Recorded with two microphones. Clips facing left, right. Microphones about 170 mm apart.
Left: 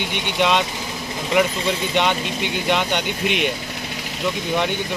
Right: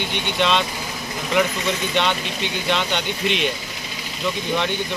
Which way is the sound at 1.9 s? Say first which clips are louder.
Left 2 dB; 15° left (ahead or behind).